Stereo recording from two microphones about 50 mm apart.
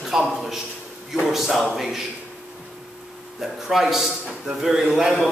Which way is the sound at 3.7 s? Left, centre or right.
Centre.